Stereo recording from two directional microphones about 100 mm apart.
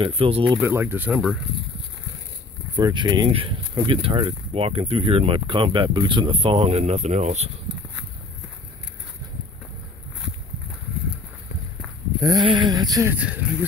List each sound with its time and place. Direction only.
0.0 s speech: 65° right (ahead or behind)
0.6 s speech: 20° right (ahead or behind)
1.1 s speech: 5° right (ahead or behind)
2.7 s speech: 50° right (ahead or behind)
3.3 s speech: 65° right (ahead or behind)
3.7 s speech: 55° right (ahead or behind); by 7.5 s 90° right
12.2 s a sound: 40° right (ahead or behind)
12.4 s speech: 50° right (ahead or behind)
13.1 s speech: 15° right (ahead or behind)